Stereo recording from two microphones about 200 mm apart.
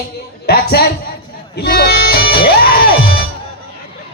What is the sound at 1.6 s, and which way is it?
Music, 50° left (ahead or behind).